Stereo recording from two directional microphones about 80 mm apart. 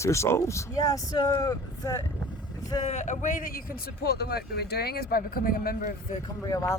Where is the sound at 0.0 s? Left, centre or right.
Left.